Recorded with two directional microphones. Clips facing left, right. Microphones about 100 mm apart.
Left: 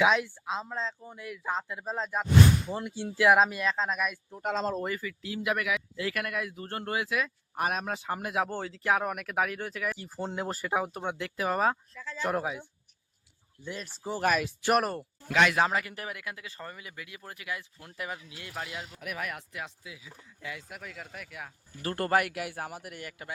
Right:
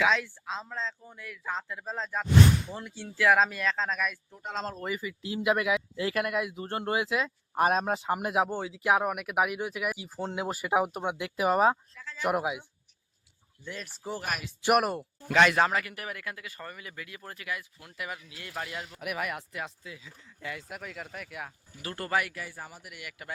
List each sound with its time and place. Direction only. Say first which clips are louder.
0.0 s speech: left 2 dB; 15° left (ahead or behind)
4.9 s speech: right 2 dB; 20° right (ahead or behind)
8.4 s speech: right 2 dB; 5° right (ahead or behind)
13.8 s speech: left 7 dB; centre (ahead or behind)
15.3 s speech: right 2 dB; 5° left (ahead or behind)
15.6 s speech: right 1 dB; 20° left (ahead or behind)
18.9 s speech: right 4 dB; 5° right (ahead or behind)
21.8 s speech: left 4 dB; 45° left (ahead or behind); by 22.9 s 65° left (ahead or behind)
22.9 s a man's voice: left 3 dB; 35° left (ahead or behind)